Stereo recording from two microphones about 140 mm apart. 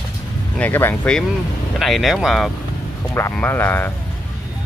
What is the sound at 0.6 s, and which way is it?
Speech, 15° left (ahead or behind).